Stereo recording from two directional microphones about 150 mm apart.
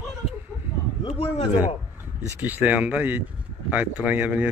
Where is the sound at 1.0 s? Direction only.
45° left (ahead or behind).